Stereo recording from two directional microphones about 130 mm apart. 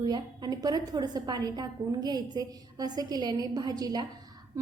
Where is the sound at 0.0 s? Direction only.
30° right (ahead or behind).